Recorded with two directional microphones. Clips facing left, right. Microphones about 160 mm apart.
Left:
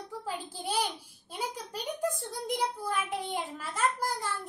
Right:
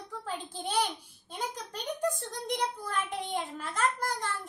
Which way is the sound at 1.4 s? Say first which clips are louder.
Left 1 dB; 5° left (ahead or behind).